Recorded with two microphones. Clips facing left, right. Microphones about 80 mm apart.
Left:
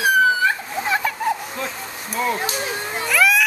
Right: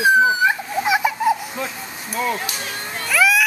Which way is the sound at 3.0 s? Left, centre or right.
Centre.